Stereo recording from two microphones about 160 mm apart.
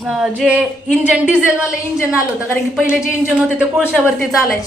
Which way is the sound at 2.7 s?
5° right (ahead or behind).